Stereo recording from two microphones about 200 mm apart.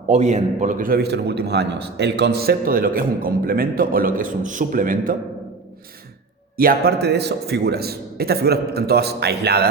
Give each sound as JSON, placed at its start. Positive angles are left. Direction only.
{"t": 0.1, "sound": "a man's voice", "side_deg": -35}
{"t": 6.6, "sound": "a man's voice", "side_deg": -50}